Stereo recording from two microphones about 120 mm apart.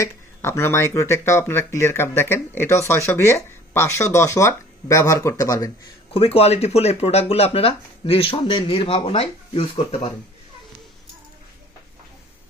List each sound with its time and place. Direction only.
0.0 s speech: 20° left (ahead or behind)
6.1 s speech: 55° left (ahead or behind)